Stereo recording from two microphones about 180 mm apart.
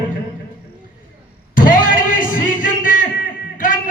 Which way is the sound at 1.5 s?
50° left (ahead or behind).